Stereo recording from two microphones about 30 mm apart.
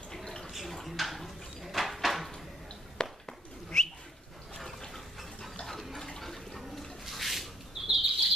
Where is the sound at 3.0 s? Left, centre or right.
Centre.